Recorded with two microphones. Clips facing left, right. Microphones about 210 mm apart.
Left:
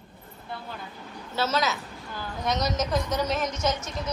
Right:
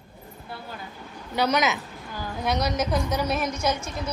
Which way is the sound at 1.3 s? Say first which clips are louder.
Right 3 dB; 15° right (ahead or behind).